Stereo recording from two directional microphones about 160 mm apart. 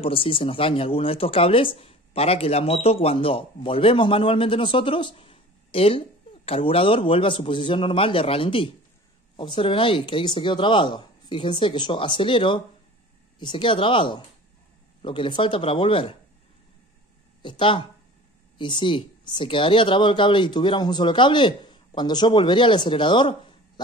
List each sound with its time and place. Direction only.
0.0 s speech: 35° left (ahead or behind)
17.4 s speech: 30° left (ahead or behind)